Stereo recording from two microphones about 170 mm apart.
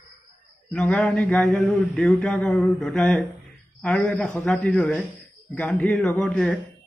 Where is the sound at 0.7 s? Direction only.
5° left (ahead or behind).